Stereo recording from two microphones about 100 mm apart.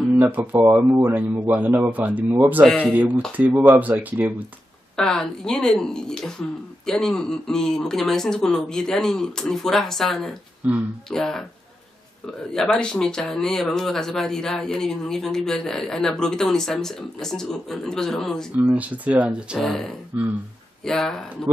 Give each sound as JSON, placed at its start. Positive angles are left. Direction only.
{"t": 0.2, "sound": "speech", "side_deg": -20}
{"t": 4.9, "sound": "speech", "side_deg": 5}
{"t": 10.6, "sound": "speech", "side_deg": -15}
{"t": 11.1, "sound": "speech", "side_deg": 5}
{"t": 12.5, "sound": "speech", "side_deg": 10}
{"t": 18.6, "sound": "speech", "side_deg": -15}
{"t": 19.6, "sound": "speech", "side_deg": 5}